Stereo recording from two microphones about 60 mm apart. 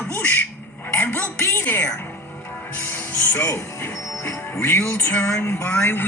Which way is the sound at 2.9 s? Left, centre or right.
Left.